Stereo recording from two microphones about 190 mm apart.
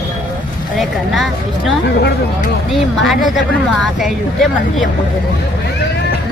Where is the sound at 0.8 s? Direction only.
Centre (ahead or behind).